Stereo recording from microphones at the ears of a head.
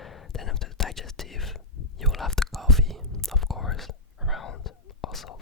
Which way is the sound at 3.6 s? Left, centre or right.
Left.